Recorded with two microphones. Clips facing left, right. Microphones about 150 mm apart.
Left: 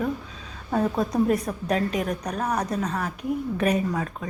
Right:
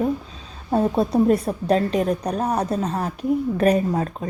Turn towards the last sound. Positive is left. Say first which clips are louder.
# right 4 dB
turn(degrees=-35)  # may be behind; listen again after turning